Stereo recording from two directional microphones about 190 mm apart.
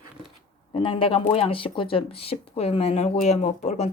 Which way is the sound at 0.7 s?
30° left (ahead or behind).